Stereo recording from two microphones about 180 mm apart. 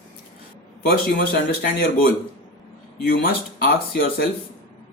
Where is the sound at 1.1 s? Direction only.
60° left (ahead or behind).